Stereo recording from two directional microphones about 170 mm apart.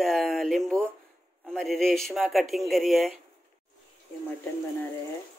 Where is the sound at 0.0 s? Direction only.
Centre (ahead or behind).